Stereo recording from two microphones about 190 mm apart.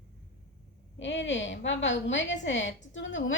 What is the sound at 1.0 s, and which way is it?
A woman's voice, 70° left (ahead or behind).